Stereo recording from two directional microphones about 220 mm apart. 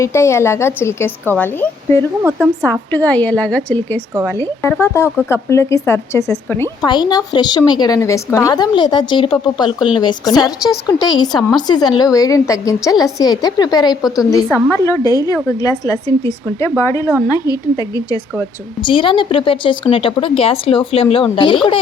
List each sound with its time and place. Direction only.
0.0 s a woman's voice: 10° left (ahead or behind)